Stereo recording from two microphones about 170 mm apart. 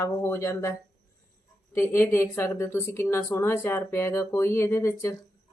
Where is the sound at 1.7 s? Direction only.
15° left (ahead or behind).